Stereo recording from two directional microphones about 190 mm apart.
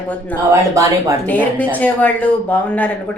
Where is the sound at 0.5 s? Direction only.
15° right (ahead or behind).